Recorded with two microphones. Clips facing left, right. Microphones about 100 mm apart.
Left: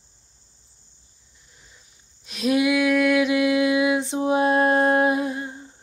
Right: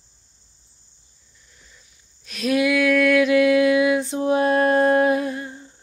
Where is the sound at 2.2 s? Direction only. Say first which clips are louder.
Even; 20° left (ahead or behind).